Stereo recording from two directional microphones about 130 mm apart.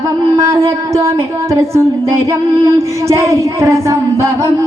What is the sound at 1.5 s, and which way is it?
Speech, 20° right (ahead or behind).